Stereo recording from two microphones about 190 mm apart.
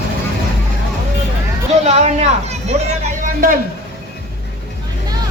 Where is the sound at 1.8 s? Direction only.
35° right (ahead or behind).